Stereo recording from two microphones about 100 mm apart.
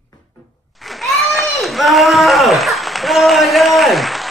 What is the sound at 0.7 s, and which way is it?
A child's voice, centre (ahead or behind).